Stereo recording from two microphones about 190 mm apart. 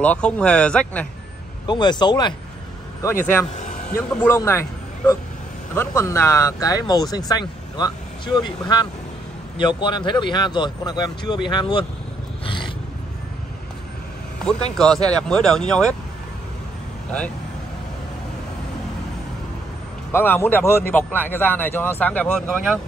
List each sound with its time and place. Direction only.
0.0 s speech: 5° left (ahead or behind)
1.7 s speech: 25° left (ahead or behind)
3.9 s speech: 15° left (ahead or behind)
12.4 s cat: 25° left (ahead or behind)
14.8 s speech: 5° left (ahead or behind)
20.1 s speech: 10° left (ahead or behind)